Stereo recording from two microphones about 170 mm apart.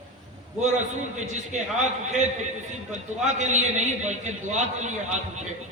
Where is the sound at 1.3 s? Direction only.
45° right (ahead or behind).